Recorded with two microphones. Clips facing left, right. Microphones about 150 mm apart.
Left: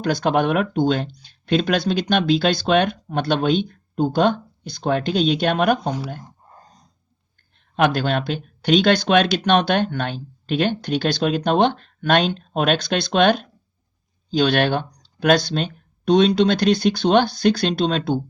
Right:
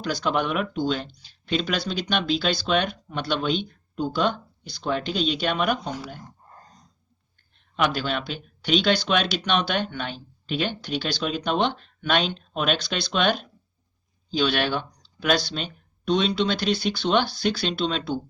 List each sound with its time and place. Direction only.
0.0 s speech: 50° left (ahead or behind)
6.2 s a sound: 10° left (ahead or behind)
7.8 s speech: 50° left (ahead or behind)